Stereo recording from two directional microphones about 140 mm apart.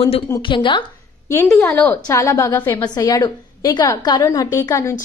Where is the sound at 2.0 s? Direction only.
25° left (ahead or behind).